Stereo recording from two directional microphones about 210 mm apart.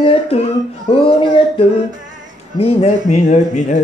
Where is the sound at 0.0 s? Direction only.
30° left (ahead or behind).